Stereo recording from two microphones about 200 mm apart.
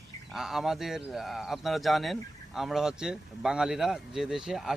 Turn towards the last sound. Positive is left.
turn(degrees=0)  # may be behind; listen again after turning